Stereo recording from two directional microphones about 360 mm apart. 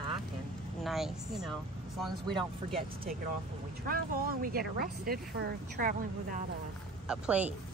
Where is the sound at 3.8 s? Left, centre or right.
Right.